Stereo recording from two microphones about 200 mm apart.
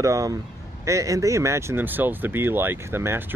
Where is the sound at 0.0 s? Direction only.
15° right (ahead or behind).